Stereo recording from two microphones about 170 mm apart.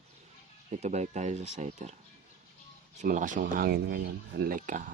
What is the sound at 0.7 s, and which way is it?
Speech, 40° right (ahead or behind).